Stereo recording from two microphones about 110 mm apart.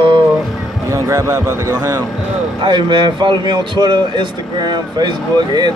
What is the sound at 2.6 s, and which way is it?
A man's voice, 45° right (ahead or behind).